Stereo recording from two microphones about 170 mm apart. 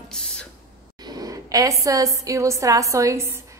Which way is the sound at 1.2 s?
20° right (ahead or behind).